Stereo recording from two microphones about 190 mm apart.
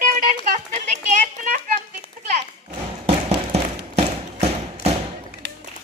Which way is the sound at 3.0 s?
35° right (ahead or behind).